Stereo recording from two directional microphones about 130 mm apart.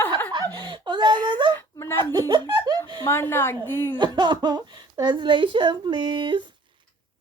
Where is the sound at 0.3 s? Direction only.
35° right (ahead or behind).